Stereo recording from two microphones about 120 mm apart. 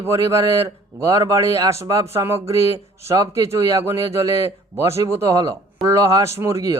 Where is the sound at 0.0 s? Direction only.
25° right (ahead or behind).